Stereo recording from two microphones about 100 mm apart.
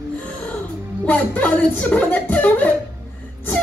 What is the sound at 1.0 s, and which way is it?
Speech, 15° left (ahead or behind).